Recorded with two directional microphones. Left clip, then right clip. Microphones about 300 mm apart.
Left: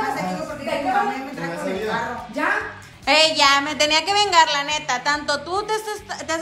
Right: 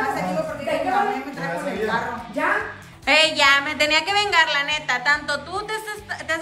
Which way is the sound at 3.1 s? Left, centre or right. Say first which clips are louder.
Even; centre.